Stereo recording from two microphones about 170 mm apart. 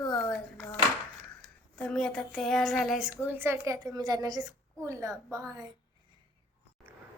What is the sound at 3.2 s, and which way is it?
A woman's voice, 15° right (ahead or behind).